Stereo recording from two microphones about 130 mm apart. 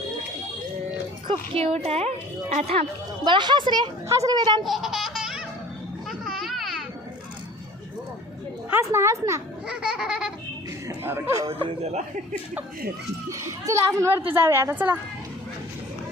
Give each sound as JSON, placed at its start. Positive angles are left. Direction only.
{"t": 1.3, "sound": "speech", "side_deg": -50}
{"t": 3.2, "sound": "a woman's voice", "side_deg": -35}
{"t": 4.6, "sound": "baby laughter", "side_deg": 0}
{"t": 6.1, "sound": "a sound", "side_deg": 0}
{"t": 8.7, "sound": "a woman's voice", "side_deg": -20}
{"t": 9.6, "sound": "a sound", "side_deg": -5}
{"t": 10.8, "sound": "speech", "side_deg": -20}
{"t": 11.4, "sound": "speech", "side_deg": -50}
{"t": 13.3, "sound": "a woman's voice", "side_deg": -20}